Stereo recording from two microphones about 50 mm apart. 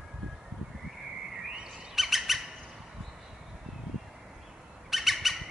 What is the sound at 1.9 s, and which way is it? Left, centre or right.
Squawk, centre.